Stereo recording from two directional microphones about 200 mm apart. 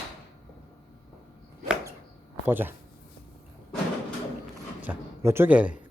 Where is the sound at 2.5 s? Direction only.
10° right (ahead or behind).